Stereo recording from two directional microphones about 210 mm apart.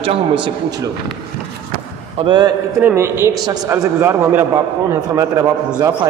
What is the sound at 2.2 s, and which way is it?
A man's voice, 20° right (ahead or behind).